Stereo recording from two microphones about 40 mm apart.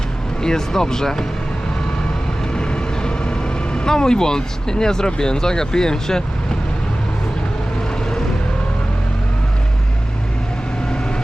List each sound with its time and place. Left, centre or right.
0.4 s speech: centre
2.6 s speech: left